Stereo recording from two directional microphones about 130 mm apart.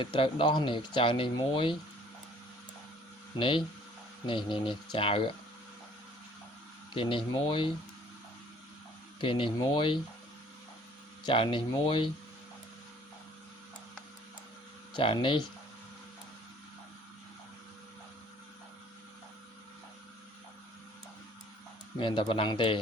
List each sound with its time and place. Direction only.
0.0 s speech: 40° left (ahead or behind)
3.3 s speech: 40° left (ahead or behind)
6.9 s speech: 40° left (ahead or behind)
9.2 s speech: 40° left (ahead or behind)
11.2 s speech: 40° left (ahead or behind)
14.9 s speech: 40° left (ahead or behind)
21.9 s speech: 40° left (ahead or behind)